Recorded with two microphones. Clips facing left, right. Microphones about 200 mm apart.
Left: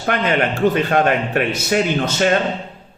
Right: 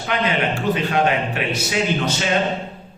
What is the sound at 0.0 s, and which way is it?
A man's voice, 50° left (ahead or behind).